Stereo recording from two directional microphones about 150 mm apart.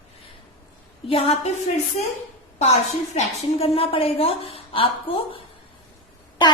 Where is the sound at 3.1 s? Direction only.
40° left (ahead or behind).